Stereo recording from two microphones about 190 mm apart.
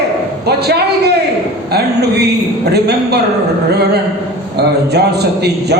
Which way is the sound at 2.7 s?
60° right (ahead or behind).